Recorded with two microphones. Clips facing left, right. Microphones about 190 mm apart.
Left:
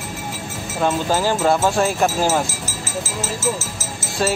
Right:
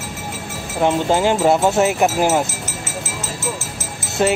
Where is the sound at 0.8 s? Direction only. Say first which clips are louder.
Right 3 dB; 20° right (ahead or behind).